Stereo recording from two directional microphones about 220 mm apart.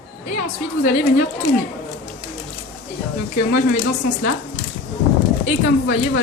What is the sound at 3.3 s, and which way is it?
Speech, 35° left (ahead or behind).